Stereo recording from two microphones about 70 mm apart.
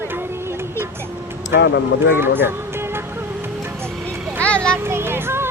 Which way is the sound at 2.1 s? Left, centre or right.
Right.